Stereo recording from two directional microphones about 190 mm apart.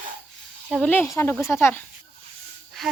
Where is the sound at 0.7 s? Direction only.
5° left (ahead or behind).